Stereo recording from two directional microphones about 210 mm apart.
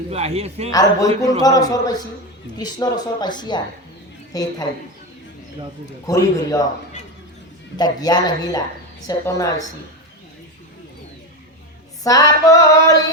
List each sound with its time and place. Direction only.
0.1 s a man's voice: 30° right (ahead or behind)
0.7 s female singing: 15° left (ahead or behind)
2.6 s a woman's voice: 20° left (ahead or behind)
6.1 s female singing: 15° left (ahead or behind)
7.8 s a woman's voice: 20° left (ahead or behind)
9.0 s female singing: 15° left (ahead or behind)
12.0 s female singing: 15° left (ahead or behind)